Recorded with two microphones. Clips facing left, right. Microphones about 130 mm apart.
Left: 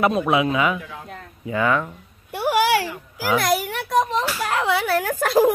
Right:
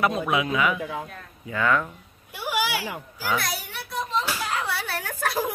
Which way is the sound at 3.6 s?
90° left.